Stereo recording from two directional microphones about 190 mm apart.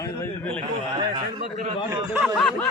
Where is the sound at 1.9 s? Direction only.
20° right (ahead or behind).